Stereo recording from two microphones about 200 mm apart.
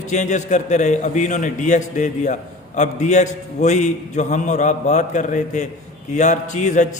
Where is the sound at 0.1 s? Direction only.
35° left (ahead or behind).